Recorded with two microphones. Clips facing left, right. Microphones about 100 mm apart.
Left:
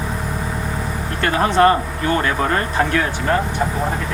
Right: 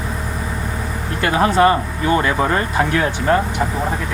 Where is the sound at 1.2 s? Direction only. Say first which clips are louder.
Even; 10° right (ahead or behind).